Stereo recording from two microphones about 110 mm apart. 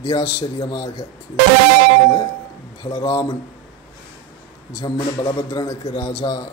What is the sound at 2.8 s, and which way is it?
Speech, 45° left (ahead or behind).